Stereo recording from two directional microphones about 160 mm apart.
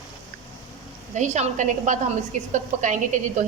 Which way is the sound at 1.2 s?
45° right (ahead or behind).